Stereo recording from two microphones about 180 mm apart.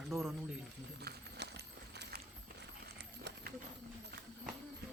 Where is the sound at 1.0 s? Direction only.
65° right (ahead or behind).